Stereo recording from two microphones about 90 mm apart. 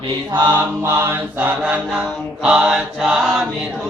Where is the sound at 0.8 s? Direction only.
20° right (ahead or behind); by 3.3 s 5° right (ahead or behind).